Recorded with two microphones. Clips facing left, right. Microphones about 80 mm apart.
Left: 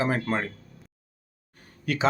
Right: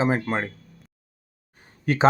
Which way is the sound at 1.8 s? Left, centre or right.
Right.